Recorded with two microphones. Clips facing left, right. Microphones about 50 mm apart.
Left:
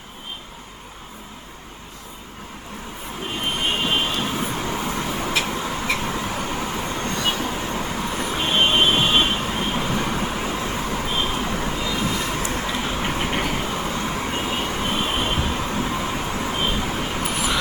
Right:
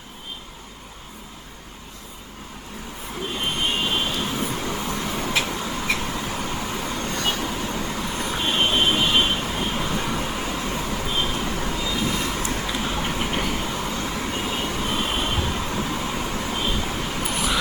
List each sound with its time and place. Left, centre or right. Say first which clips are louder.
3.7 s vehicle: left 4 dB; left
5.4 s a sound: left 1 dB; left
6.0 s vehicle: left 2 dB; left
12.2 s vehicle: left 1 dB; centre
17.2 s vehicle: even; centre